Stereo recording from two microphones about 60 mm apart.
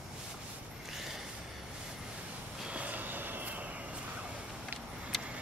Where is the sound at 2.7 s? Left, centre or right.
Right.